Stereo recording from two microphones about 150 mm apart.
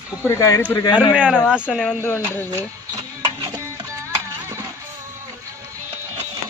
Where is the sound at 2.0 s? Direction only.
15° left (ahead or behind).